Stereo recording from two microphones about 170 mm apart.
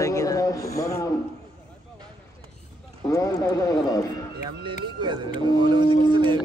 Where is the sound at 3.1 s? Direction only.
20° left (ahead or behind).